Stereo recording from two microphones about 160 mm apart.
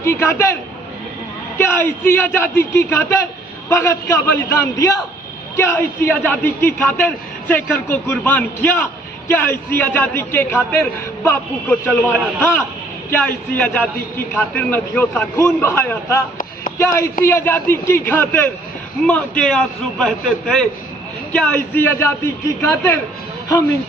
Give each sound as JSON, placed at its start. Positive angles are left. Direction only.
{"t": 0.0, "sound": "a man's voice", "side_deg": 15}
{"t": 1.5, "sound": "a man's voice", "side_deg": 15}